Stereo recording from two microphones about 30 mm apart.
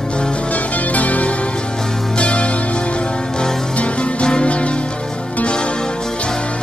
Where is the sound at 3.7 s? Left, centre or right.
Left.